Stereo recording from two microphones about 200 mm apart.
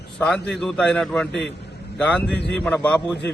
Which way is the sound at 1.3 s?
60° left (ahead or behind).